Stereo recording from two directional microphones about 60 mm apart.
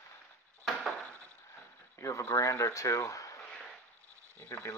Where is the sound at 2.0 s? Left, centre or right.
Left.